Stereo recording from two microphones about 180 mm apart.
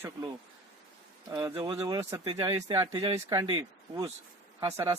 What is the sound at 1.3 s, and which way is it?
Speech, 15° right (ahead or behind).